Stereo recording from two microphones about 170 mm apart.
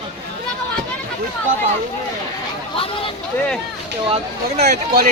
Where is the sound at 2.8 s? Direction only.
30° left (ahead or behind).